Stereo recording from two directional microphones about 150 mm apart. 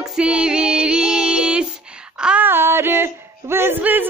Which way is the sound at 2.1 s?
5° right (ahead or behind).